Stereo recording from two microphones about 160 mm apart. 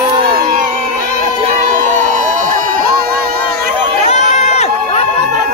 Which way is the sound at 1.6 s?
50° right (ahead or behind).